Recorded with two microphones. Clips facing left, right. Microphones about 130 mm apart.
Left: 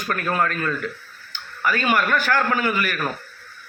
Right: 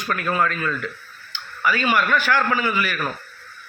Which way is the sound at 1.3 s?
45° left (ahead or behind).